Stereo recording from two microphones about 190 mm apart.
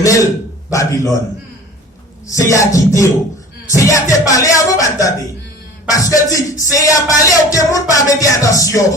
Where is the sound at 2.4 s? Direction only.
15° left (ahead or behind).